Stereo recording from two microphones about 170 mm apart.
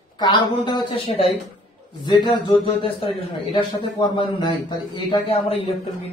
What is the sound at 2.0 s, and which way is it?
A man's voice, 25° left (ahead or behind).